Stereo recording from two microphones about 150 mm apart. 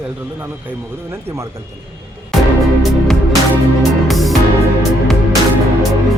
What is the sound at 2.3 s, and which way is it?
Music, centre (ahead or behind).